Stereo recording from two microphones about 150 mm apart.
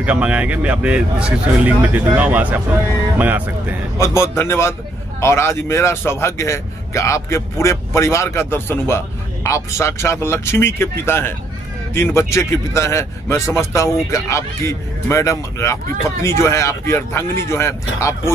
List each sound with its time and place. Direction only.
0.0 s speech: 10° right (ahead or behind)
4.0 s a man's voice: 20° left (ahead or behind)